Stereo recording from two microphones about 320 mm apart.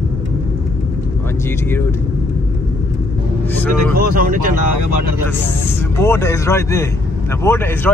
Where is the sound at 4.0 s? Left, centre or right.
Right.